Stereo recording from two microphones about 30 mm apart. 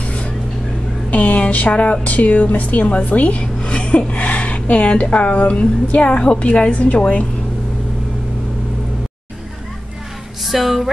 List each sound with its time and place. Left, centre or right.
0.0 s vehicle: left
1.1 s a sound: left
1.5 s a woman's voice: left
2.8 s a woman's voice: left
3.6 s gasp: left
4.1 s a sound: left
5.1 s a woman's voice: left
6.4 s a woman's voice: left
10.4 s a woman's voice: centre